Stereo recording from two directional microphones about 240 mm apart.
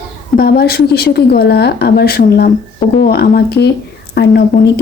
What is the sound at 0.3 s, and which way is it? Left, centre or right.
A woman's voice, left.